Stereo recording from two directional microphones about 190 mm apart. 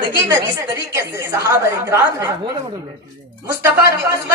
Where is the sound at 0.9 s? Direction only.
15° right (ahead or behind).